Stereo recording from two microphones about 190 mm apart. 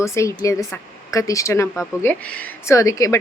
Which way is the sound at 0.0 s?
15° left (ahead or behind).